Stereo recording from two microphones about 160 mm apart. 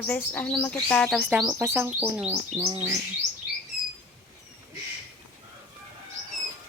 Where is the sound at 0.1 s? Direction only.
10° left (ahead or behind).